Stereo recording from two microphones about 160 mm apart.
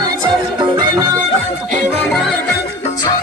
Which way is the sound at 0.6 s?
25° right (ahead or behind).